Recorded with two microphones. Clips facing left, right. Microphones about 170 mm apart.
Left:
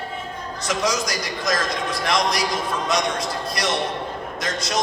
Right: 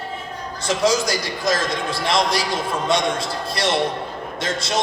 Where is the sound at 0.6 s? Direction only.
30° right (ahead or behind).